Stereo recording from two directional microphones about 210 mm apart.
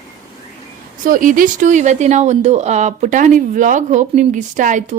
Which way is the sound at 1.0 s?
40° right (ahead or behind).